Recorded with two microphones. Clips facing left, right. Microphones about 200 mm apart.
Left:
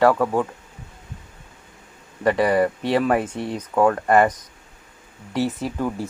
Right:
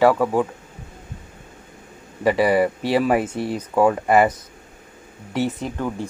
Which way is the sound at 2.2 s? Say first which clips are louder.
Right 1 dB; 5° right (ahead or behind).